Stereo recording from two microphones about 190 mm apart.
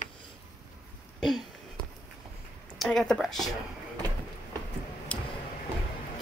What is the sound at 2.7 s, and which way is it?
Speech, centre (ahead or behind).